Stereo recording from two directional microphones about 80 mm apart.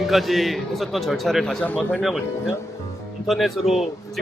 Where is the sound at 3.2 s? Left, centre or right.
Centre.